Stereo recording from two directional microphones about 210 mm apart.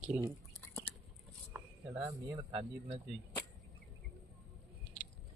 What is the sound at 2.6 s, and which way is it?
Speech, 25° right (ahead or behind).